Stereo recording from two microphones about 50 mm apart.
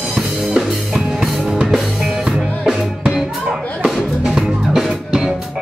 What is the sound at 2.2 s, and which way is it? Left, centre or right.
Music, centre.